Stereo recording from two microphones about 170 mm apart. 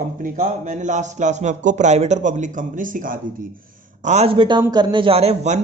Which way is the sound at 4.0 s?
40° right (ahead or behind).